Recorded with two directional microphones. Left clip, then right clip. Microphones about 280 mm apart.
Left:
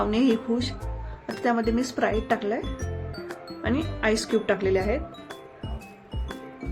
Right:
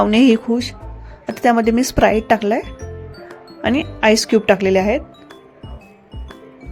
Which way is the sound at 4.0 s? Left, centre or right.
Right.